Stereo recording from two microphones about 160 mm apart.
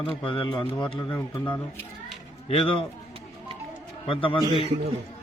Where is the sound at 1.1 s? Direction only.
15° left (ahead or behind).